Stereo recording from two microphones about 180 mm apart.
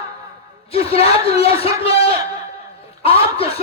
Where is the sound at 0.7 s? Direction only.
35° left (ahead or behind).